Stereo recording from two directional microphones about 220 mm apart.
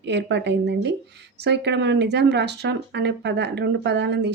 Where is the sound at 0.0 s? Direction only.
50° right (ahead or behind).